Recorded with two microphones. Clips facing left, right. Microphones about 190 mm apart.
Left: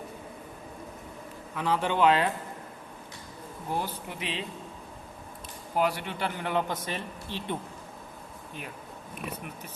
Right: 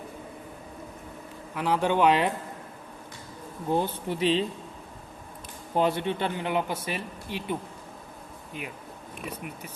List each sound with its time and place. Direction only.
1.5 s speech: 15° right (ahead or behind)
3.7 s speech: 20° right (ahead or behind)
5.7 s speech: 25° right (ahead or behind)